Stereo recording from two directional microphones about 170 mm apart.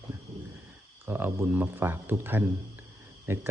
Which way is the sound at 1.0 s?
15° right (ahead or behind).